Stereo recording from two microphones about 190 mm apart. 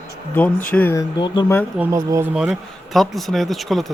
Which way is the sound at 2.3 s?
5° right (ahead or behind).